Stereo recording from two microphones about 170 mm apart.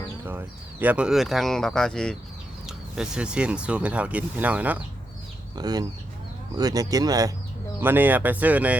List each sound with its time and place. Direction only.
0.3 s speech: 10° right (ahead or behind)
5.5 s speech: 25° right (ahead or behind)